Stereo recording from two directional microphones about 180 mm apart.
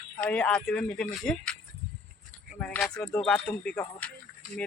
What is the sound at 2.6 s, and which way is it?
Speech, 5° left (ahead or behind).